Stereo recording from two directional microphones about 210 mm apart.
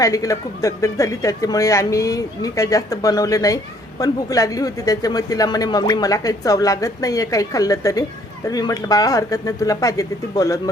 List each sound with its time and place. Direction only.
0.0 s speech: 15° left (ahead or behind)